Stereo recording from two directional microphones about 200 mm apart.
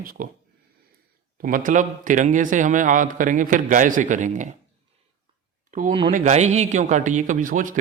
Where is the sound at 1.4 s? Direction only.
40° right (ahead or behind).